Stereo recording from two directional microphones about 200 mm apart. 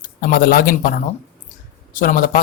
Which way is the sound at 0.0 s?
45° left (ahead or behind).